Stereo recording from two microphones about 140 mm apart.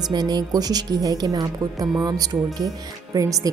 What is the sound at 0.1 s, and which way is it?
A woman's voice, 30° right (ahead or behind).